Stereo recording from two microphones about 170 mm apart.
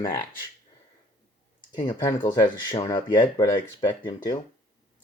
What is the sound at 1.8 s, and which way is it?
Speech, 25° left (ahead or behind).